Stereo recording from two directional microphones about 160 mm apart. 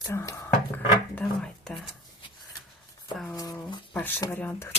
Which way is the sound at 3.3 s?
20° left (ahead or behind).